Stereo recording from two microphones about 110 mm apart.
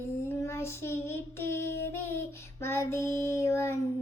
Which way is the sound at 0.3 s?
25° left (ahead or behind).